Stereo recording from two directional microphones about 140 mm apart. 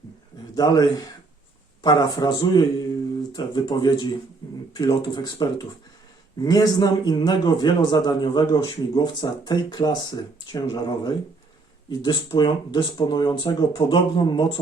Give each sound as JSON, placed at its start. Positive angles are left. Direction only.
{"t": 0.5, "sound": "a man's voice", "side_deg": 25}